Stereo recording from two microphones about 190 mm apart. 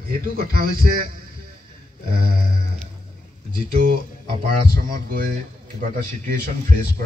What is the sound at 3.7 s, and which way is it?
A man's voice, 50° right (ahead or behind).